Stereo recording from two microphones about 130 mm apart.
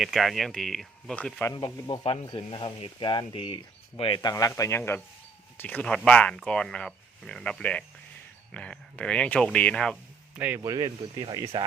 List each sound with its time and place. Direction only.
0.0 s speech: centre (ahead or behind)
1.5 s speech: 40° left (ahead or behind); by 10.0 s 5° left (ahead or behind)
10.3 s speech: 10° right (ahead or behind)
10.6 s speech: 30° right (ahead or behind)